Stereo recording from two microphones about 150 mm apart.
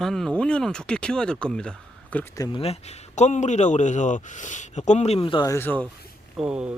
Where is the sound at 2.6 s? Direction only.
45° left (ahead or behind).